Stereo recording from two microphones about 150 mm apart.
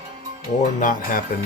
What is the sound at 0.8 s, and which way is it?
Speech, 65° left (ahead or behind).